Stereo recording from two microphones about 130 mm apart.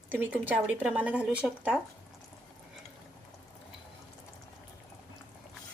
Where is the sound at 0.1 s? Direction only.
15° right (ahead or behind).